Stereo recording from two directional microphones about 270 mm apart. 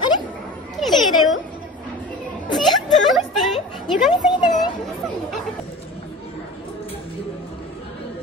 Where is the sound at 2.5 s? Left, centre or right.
Centre.